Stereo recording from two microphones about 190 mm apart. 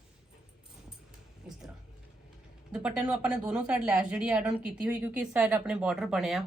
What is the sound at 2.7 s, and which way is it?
A woman's voice, 5° right (ahead or behind).